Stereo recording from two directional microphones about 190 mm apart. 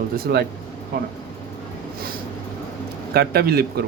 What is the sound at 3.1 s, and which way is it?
Speech, 55° right (ahead or behind).